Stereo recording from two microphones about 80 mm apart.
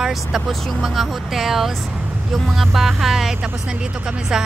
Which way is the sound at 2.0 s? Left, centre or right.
Centre.